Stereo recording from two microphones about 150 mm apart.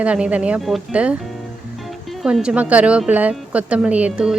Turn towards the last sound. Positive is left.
turn(degrees=-10)  # may be behind; listen again after turning